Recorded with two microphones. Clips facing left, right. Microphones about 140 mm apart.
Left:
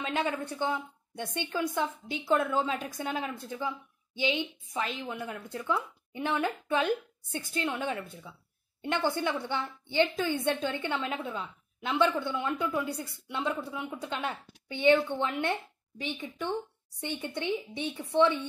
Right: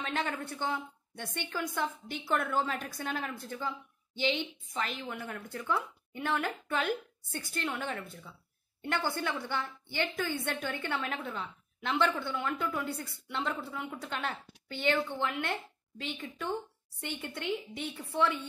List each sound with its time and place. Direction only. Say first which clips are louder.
0.0 s a woman's voice: left 3 dB; 15° left (ahead or behind)
11.3 s a woman's voice: left 2 dB; 5° left (ahead or behind)
12.0 s a woman's voice: left 4 dB; 15° left (ahead or behind)